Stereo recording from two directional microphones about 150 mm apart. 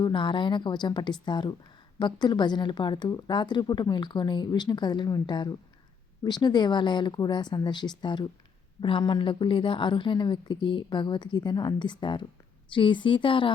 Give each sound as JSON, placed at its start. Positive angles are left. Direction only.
{"t": 0.0, "sound": "a woman's voice", "side_deg": 35}